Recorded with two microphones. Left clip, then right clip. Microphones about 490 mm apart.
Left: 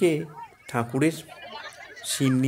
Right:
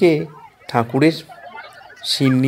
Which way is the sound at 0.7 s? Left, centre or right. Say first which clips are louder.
Right 9 dB; left.